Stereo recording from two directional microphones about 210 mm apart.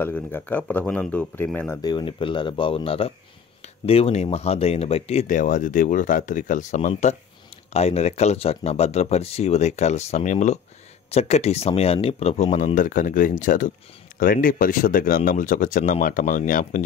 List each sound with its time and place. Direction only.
0.0 s speech: 10° left (ahead or behind)
1.8 s speech: 20° left (ahead or behind); by 16.8 s 40° left (ahead or behind)